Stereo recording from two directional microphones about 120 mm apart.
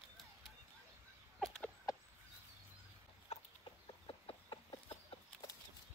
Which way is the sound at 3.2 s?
50° left (ahead or behind).